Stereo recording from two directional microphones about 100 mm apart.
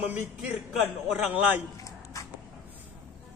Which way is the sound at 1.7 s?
35° left (ahead or behind).